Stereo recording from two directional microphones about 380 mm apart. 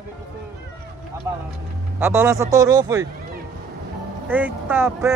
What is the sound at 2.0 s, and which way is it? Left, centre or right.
Speech, centre.